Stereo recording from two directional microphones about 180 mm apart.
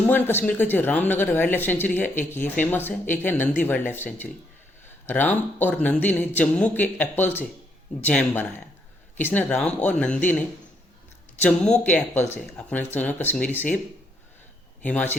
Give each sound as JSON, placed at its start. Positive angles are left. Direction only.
{"t": 0.1, "sound": "speech", "side_deg": 10}
{"t": 11.3, "sound": "speech", "side_deg": 5}
{"t": 14.8, "sound": "speech", "side_deg": 10}